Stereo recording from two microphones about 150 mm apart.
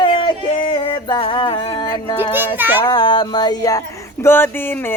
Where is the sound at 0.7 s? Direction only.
35° left (ahead or behind).